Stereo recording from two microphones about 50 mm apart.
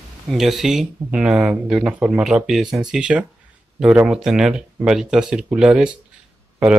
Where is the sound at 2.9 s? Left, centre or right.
Centre.